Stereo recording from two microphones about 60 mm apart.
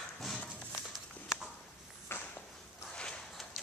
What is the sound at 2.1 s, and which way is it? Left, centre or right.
Walk, left.